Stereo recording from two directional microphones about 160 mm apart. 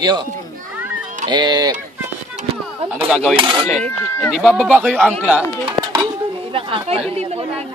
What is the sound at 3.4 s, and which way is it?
Speech, 30° right (ahead or behind).